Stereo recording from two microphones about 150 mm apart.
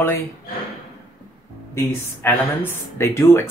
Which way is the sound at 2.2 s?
15° left (ahead or behind).